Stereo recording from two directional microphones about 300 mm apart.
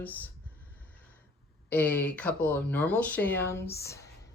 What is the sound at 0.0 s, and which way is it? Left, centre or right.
Speech, centre.